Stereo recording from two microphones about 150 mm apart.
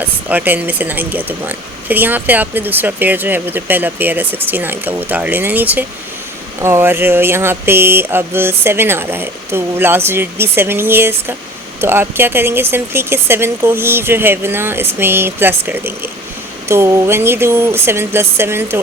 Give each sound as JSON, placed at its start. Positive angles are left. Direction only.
{"t": 0.0, "sound": "speech", "side_deg": -10}